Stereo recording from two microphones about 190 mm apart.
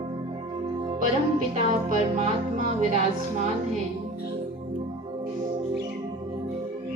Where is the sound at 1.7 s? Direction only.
40° right (ahead or behind).